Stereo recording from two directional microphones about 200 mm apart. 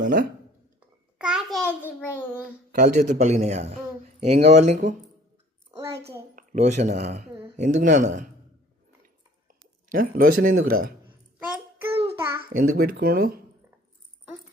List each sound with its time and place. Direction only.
0.0 s speech: 40° right (ahead or behind)
1.2 s a sound: 5° right (ahead or behind)
2.0 s child singing: 10° left (ahead or behind)
2.7 s a man's voice: 40° right (ahead or behind)
6.3 s speech: 40° right (ahead or behind)
9.5 s speech: 45° right (ahead or behind)
11.9 s child singing: 30° right (ahead or behind)
12.4 s speech: 50° right (ahead or behind)